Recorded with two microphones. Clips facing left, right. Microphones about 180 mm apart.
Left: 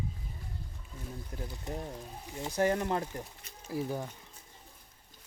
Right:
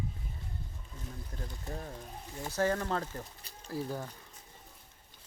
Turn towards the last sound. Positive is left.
turn(degrees=10)  # may be behind; listen again after turning